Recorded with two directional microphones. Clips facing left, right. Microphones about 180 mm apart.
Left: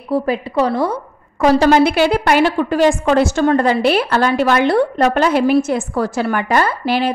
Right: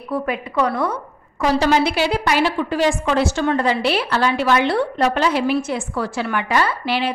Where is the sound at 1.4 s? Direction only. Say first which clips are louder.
Left 6 dB; 50° left (ahead or behind).